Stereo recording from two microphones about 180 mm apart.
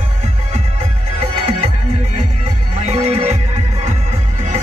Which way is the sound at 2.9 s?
35° right (ahead or behind).